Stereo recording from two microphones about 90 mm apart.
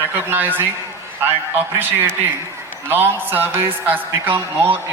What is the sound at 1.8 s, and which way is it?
A man's voice, 25° right (ahead or behind).